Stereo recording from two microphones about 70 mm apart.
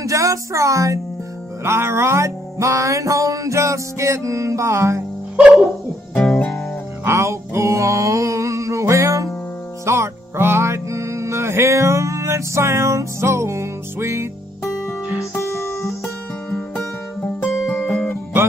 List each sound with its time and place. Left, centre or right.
0.0 s music: right
6.1 s music: centre
7.1 s music: right
9.8 s music: right
15.1 s guitar: left
16.7 s music: left
17.6 s guitar: left